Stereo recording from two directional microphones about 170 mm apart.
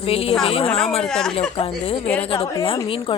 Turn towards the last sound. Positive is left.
turn(degrees=30)  # may be behind; listen again after turning